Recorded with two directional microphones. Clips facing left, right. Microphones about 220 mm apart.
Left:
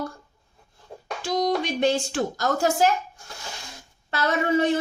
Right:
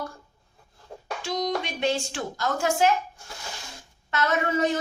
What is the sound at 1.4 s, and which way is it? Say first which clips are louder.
A woman's voice: left 5 dB; 45° left (ahead or behind).